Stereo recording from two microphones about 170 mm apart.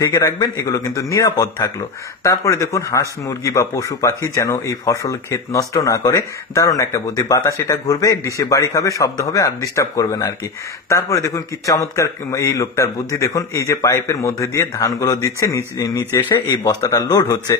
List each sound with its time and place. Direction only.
0.0 s a man's voice: 15° left (ahead or behind)